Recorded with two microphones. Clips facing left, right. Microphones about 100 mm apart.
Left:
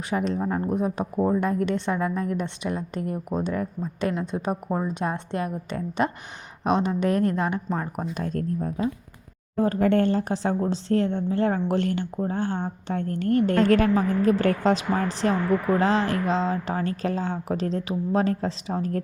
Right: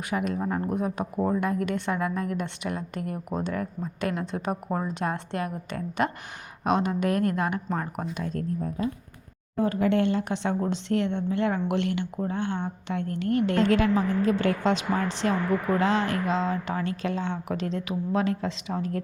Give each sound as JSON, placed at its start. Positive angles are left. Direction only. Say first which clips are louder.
{"t": 0.1, "sound": "a woman's voice", "louder": "left 3 dB", "side_deg": 30}
{"t": 8.1, "sound": "a woman's voice", "louder": "left 3 dB", "side_deg": 45}